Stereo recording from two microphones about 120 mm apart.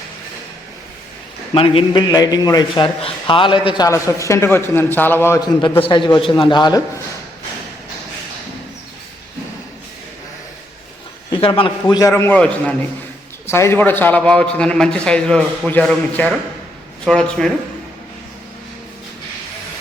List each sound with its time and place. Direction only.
1.5 s a man's voice: 50° left (ahead or behind)
3.8 s a man's voice: 25° left (ahead or behind)
5.8 s a man's voice: 45° left (ahead or behind)
11.3 s a man's voice: 50° left (ahead or behind)
12.1 s a man's voice: 15° left (ahead or behind)